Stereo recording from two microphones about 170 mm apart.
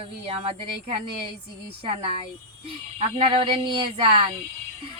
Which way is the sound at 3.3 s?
30° right (ahead or behind).